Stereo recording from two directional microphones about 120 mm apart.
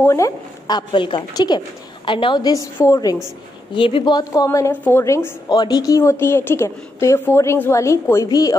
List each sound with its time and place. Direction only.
0.0 s a woman's voice: 25° left (ahead or behind)
0.7 s a woman's voice: 40° left (ahead or behind)
3.7 s a woman's voice: 45° left (ahead or behind)